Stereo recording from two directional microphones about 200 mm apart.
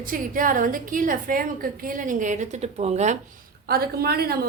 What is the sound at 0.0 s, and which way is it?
A woman's voice, 45° right (ahead or behind).